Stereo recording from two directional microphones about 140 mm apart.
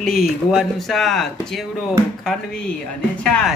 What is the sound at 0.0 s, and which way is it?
Speech, centre (ahead or behind).